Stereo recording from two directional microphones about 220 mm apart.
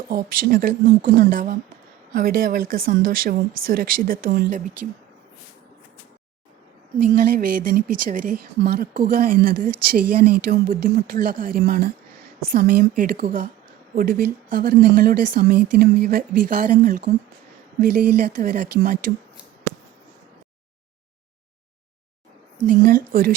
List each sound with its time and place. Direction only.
0.1 s speech: 40° right (ahead or behind)
7.0 s speech: 40° right (ahead or behind)
18.3 s speech: 40° right (ahead or behind)
22.6 s speech: 40° right (ahead or behind)